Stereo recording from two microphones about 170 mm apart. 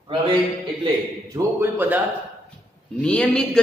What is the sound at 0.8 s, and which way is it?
A man's voice, 20° right (ahead or behind).